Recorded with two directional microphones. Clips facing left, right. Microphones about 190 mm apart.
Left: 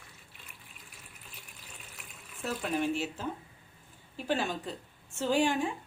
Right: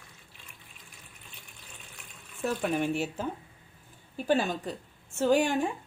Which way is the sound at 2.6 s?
55° right (ahead or behind).